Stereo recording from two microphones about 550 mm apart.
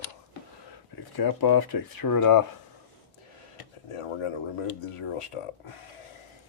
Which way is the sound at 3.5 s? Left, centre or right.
Left.